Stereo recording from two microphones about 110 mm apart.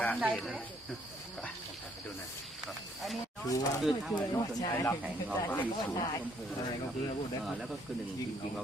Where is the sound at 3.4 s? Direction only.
30° left (ahead or behind).